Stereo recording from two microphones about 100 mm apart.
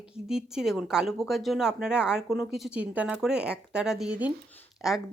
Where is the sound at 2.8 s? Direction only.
15° right (ahead or behind).